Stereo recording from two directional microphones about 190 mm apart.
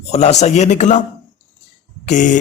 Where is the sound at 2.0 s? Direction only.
40° left (ahead or behind).